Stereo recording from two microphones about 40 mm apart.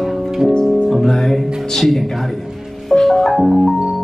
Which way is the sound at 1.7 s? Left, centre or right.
Centre.